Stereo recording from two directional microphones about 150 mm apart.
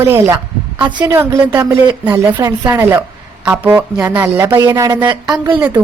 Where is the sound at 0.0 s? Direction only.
15° right (ahead or behind).